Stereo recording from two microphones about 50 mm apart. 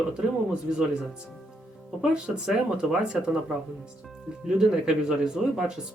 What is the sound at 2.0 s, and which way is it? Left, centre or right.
Speech, centre.